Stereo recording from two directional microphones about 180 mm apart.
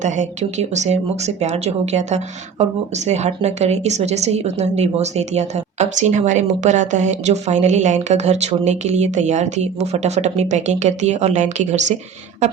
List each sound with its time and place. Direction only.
0.7 s a woman's voice: 40° right (ahead or behind)